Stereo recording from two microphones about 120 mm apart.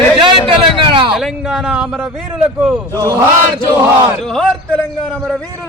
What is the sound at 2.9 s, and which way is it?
Speech, 25° right (ahead or behind).